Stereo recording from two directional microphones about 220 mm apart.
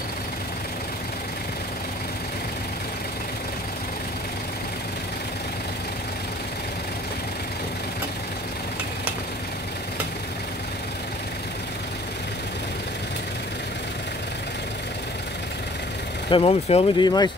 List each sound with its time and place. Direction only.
16.3 s speech: 25° left (ahead or behind)